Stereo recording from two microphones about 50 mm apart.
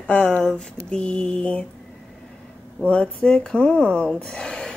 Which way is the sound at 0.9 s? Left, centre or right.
Left.